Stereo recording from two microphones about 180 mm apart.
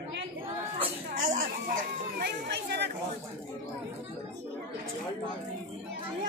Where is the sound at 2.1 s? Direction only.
65° right (ahead or behind).